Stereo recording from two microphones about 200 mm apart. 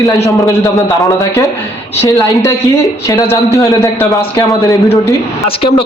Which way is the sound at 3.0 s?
15° left (ahead or behind).